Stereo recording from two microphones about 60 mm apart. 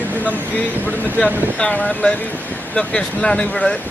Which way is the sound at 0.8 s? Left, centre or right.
Centre.